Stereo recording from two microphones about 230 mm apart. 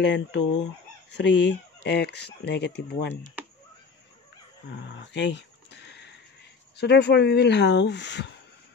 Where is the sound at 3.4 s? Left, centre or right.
Centre.